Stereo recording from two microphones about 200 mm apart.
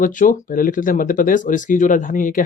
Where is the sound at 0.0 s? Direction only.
40° left (ahead or behind).